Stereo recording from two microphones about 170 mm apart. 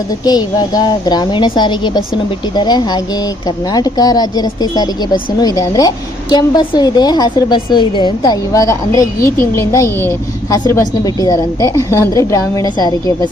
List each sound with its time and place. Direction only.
0.3 s a woman's voice: 25° left (ahead or behind)